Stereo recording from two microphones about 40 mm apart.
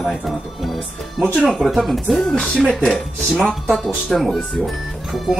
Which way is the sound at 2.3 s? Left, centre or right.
Centre.